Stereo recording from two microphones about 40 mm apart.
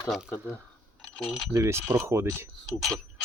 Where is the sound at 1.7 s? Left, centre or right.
Right.